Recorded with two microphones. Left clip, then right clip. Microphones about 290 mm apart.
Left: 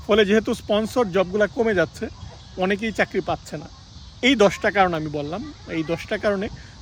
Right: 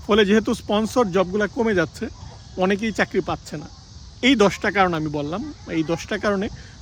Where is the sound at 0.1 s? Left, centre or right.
Centre.